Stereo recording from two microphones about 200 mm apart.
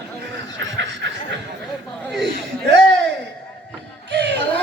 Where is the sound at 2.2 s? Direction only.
60° right (ahead or behind).